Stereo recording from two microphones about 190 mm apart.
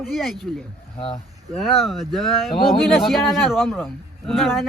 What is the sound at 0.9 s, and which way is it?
Speech, 30° left (ahead or behind).